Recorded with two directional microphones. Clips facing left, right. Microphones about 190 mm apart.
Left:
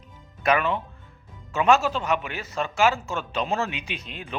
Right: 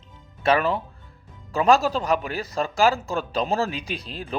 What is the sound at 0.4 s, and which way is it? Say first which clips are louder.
Speech: right 2 dB; 35° right (ahead or behind).